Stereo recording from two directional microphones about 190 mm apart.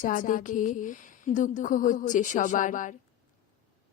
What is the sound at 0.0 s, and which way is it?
A woman's voice, 45° left (ahead or behind).